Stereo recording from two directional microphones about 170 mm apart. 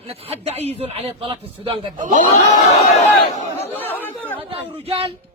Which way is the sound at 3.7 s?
10° left (ahead or behind).